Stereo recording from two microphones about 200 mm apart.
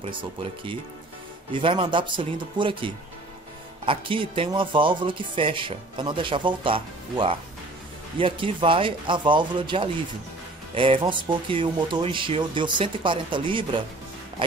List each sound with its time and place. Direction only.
0.0 s speech: 25° right (ahead or behind)